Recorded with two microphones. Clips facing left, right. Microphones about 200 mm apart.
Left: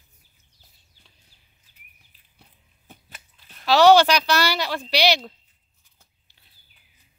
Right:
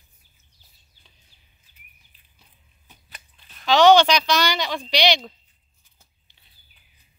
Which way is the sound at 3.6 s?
5° left (ahead or behind).